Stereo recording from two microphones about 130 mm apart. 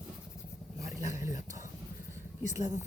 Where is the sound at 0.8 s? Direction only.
25° right (ahead or behind).